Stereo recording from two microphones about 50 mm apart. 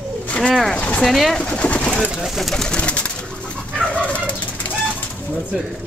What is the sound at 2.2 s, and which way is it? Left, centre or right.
Speech, centre.